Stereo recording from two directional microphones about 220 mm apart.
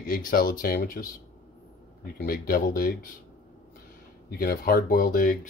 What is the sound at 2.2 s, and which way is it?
Speech, 40° left (ahead or behind).